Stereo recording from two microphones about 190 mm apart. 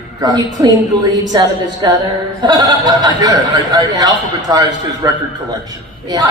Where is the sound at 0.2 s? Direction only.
20° right (ahead or behind).